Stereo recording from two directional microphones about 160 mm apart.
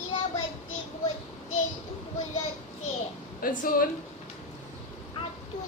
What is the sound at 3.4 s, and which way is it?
Speech, 60° left (ahead or behind).